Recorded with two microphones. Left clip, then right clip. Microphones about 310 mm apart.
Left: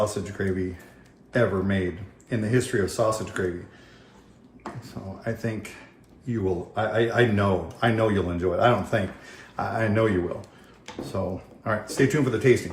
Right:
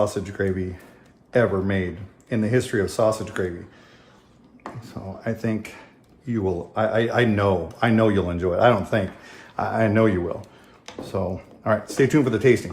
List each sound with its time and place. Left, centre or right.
0.0 s speech: right
5.2 s speech: right
11.1 s speech: right